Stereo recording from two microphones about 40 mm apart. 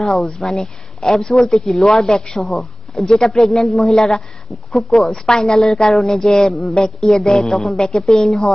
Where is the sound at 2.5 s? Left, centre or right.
Centre.